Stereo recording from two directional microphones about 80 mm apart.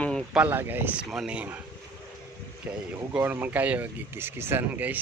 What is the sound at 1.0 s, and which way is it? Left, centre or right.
Speech, centre.